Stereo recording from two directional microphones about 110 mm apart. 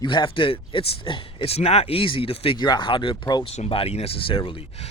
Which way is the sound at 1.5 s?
70° left (ahead or behind).